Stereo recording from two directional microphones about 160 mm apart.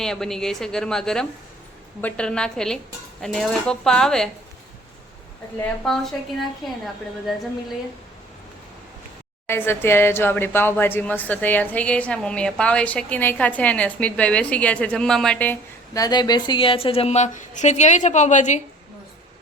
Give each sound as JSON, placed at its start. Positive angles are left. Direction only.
{"t": 0.0, "sound": "a woman's voice", "side_deg": 5}
{"t": 5.8, "sound": "a woman's voice", "side_deg": 0}
{"t": 9.5, "sound": "speech", "side_deg": 15}
{"t": 16.0, "sound": "a woman's voice", "side_deg": 25}